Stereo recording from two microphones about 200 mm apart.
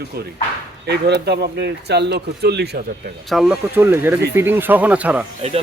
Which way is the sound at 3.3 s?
Centre (ahead or behind).